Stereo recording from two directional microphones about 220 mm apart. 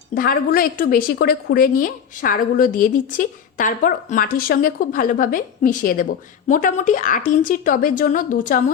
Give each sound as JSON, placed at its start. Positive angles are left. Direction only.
{"t": 0.1, "sound": "a woman's voice", "side_deg": 40}